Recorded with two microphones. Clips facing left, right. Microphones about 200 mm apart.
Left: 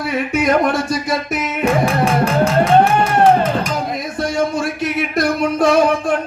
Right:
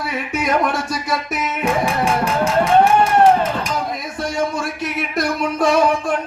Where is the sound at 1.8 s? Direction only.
35° left (ahead or behind).